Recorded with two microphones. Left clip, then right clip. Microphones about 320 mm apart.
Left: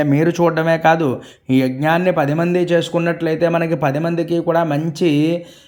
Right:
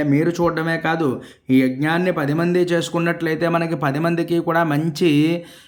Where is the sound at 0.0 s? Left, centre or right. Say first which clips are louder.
Left 3 dB; centre.